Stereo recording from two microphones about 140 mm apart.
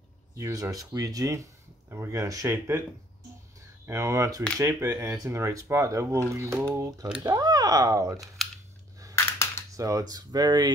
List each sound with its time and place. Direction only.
0.4 s speech: 25° right (ahead or behind)
3.8 s speech: 20° right (ahead or behind)
9.1 s a sound: 20° left (ahead or behind)
9.8 s speech: 25° right (ahead or behind)